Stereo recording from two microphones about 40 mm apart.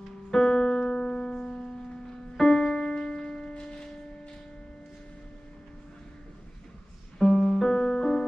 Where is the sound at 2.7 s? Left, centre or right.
Left.